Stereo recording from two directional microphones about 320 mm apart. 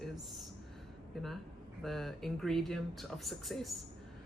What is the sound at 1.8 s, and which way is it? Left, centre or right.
Speech, centre.